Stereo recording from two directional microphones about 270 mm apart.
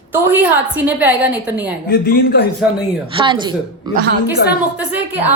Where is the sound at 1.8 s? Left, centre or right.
Left.